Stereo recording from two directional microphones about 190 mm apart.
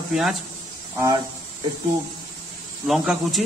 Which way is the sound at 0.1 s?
Centre (ahead or behind).